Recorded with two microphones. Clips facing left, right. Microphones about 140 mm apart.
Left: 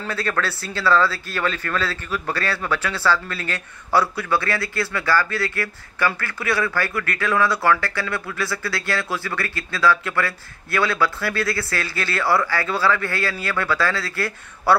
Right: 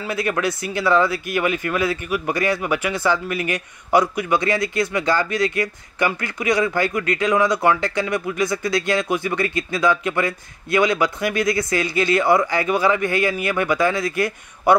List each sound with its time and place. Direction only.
0.0 s speech: 15° right (ahead or behind)